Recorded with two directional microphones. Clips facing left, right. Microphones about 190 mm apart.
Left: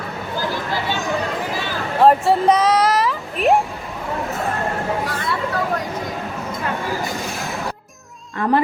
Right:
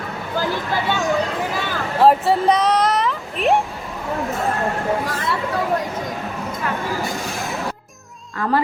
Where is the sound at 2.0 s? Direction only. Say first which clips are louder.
Left 1 dB; centre (ahead or behind).